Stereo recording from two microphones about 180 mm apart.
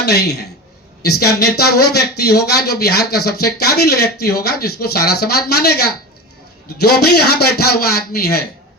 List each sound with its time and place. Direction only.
0.0 s speech: 65° left (ahead or behind)
6.8 s speech: 60° left (ahead or behind)